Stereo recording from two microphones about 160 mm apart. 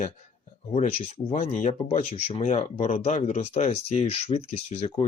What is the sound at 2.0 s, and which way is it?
Speech, 40° left (ahead or behind).